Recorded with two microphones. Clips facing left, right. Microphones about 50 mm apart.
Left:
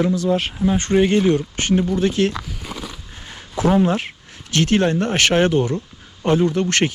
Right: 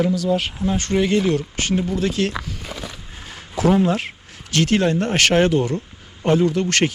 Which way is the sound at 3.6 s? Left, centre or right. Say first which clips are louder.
Even; left.